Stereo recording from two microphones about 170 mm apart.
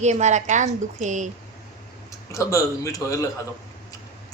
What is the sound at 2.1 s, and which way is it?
A man's voice, 20° left (ahead or behind).